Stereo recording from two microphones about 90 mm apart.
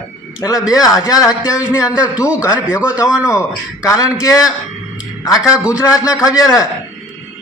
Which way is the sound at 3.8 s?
40° left (ahead or behind).